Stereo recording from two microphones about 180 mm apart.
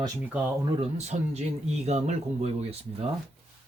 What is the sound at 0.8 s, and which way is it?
Speech, 40° right (ahead or behind).